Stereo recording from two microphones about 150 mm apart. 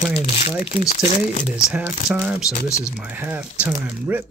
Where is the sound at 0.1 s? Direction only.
40° left (ahead or behind).